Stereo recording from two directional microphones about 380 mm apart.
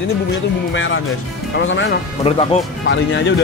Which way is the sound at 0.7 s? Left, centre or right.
Left.